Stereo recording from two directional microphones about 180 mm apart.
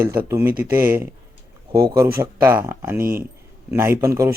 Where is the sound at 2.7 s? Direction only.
15° right (ahead or behind).